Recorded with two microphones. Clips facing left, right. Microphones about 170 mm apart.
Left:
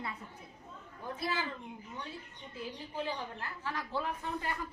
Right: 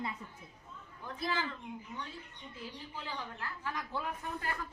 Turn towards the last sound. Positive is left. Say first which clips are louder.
# left 2 dB
turn(degrees=0)  # may be behind; listen again after turning